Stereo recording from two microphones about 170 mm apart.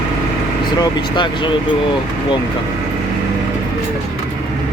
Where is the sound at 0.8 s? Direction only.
25° left (ahead or behind).